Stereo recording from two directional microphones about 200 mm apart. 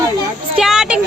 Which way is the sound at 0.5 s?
Centre (ahead or behind).